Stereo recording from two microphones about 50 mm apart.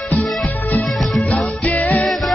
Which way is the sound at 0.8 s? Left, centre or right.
Centre.